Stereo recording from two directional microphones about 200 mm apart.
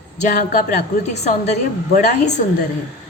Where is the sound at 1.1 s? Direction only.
35° left (ahead or behind).